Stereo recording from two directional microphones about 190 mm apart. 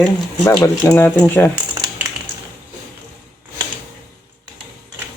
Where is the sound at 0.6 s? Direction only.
15° left (ahead or behind).